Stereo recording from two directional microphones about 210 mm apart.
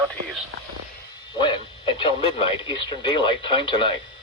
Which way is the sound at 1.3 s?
20° left (ahead or behind).